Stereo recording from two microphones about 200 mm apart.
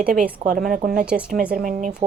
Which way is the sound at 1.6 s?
40° right (ahead or behind).